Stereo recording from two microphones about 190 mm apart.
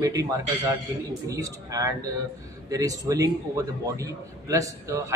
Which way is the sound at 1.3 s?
15° right (ahead or behind).